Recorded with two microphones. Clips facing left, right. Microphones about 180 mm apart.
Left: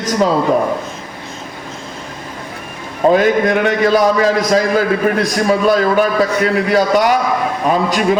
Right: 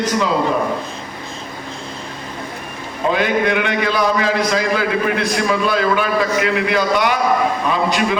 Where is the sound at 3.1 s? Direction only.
40° left (ahead or behind).